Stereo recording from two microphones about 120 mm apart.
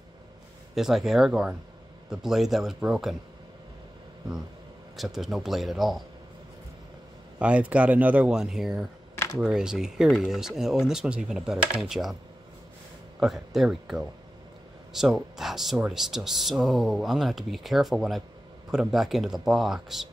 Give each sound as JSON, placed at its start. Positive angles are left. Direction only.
{"t": 0.7, "sound": "speech", "side_deg": -5}
{"t": 4.9, "sound": "speech", "side_deg": 0}
{"t": 7.3, "sound": "speech", "side_deg": -10}
{"t": 9.1, "sound": "a sound", "side_deg": 25}
{"t": 9.4, "sound": "speech", "side_deg": -5}
{"t": 13.2, "sound": "speech", "side_deg": 0}